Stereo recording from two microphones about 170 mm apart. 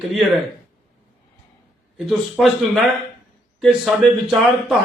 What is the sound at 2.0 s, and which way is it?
Speech, centre (ahead or behind).